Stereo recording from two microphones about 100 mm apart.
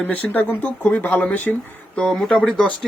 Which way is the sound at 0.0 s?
15° left (ahead or behind).